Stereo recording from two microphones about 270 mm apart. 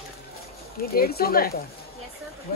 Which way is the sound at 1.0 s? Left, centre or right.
Left.